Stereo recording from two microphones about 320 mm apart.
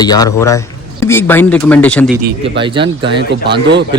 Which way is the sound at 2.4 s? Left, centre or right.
Centre.